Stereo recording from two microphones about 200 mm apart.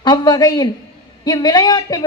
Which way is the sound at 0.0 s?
20° left (ahead or behind).